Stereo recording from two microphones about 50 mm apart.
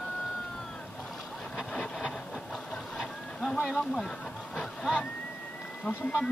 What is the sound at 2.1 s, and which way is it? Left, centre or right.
Train, centre.